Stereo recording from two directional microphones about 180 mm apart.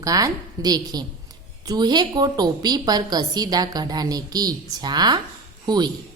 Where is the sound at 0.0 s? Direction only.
20° right (ahead or behind).